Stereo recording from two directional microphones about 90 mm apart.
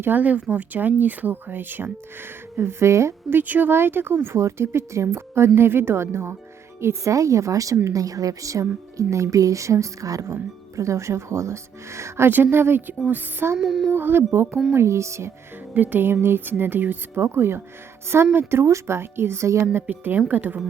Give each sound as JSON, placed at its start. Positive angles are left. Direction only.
{"t": 0.0, "sound": "speech", "side_deg": -20}
{"t": 13.6, "sound": "speech", "side_deg": -5}
{"t": 13.9, "sound": "speech", "side_deg": -25}
{"t": 15.7, "sound": "speech", "side_deg": -20}